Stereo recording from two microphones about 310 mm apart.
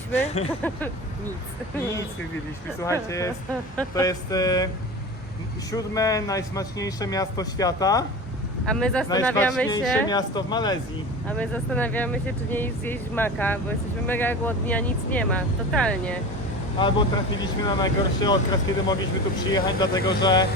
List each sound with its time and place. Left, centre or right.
0.1 s speech: left
0.6 s speech: centre
2.8 s a man's voice: centre
5.7 s a man's voice: centre
16.7 s a man's voice: centre
19.5 s a man's voice: centre